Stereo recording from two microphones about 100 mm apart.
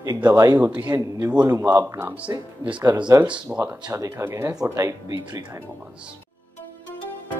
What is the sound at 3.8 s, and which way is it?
Speech, 30° right (ahead or behind).